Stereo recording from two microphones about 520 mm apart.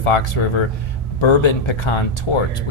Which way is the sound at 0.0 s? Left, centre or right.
Left.